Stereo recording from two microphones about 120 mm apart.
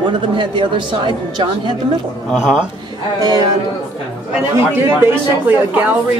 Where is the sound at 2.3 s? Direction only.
5° right (ahead or behind).